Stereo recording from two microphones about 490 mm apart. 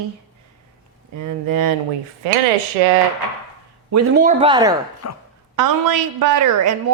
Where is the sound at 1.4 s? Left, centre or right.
Right.